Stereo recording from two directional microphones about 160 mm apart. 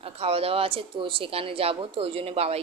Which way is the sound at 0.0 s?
35° right (ahead or behind).